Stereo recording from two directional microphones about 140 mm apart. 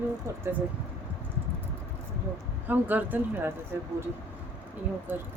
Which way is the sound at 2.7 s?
15° right (ahead or behind).